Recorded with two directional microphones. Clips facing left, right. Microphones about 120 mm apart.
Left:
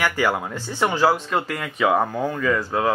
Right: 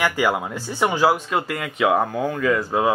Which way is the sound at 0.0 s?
15° right (ahead or behind).